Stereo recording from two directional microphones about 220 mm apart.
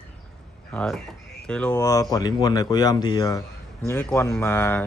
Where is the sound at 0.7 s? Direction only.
Centre (ahead or behind).